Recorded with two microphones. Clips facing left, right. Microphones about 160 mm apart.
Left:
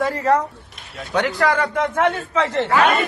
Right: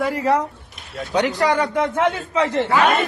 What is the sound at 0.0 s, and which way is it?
A man's voice, 10° right (ahead or behind).